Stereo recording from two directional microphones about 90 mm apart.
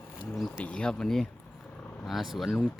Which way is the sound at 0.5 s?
15° left (ahead or behind).